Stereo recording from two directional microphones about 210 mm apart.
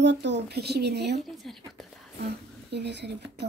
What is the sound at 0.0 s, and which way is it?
A woman's voice, 55° right (ahead or behind).